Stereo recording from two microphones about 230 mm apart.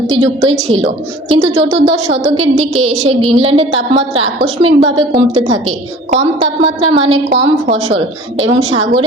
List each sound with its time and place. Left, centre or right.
0.1 s a woman's voice: right